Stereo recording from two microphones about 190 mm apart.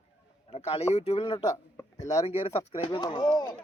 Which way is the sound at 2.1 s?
30° left (ahead or behind).